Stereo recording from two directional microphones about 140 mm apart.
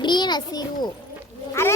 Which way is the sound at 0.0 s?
30° left (ahead or behind).